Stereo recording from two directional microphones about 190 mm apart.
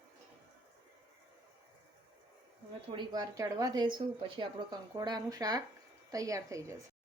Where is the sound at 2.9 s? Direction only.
25° right (ahead or behind).